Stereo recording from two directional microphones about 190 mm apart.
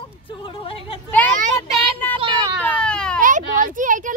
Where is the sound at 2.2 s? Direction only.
25° right (ahead or behind).